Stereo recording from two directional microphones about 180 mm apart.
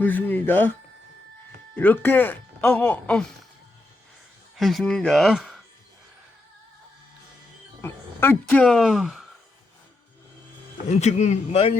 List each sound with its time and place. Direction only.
0.0 s speech: 10° left (ahead or behind)
1.7 s speech: 10° left (ahead or behind)
4.5 s speech: centre (ahead or behind)
7.8 s speech: 10° left (ahead or behind)
8.6 s speech: centre (ahead or behind)
10.8 s speech: 40° left (ahead or behind)